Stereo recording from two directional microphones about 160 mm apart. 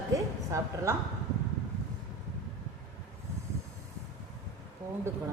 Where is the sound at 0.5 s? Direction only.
20° right (ahead or behind).